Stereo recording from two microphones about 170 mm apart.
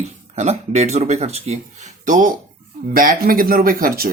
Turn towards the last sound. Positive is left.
turn(degrees=-60)  # may be behind; listen again after turning